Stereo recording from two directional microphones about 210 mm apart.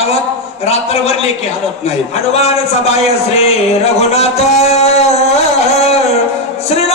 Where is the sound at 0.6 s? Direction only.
30° left (ahead or behind).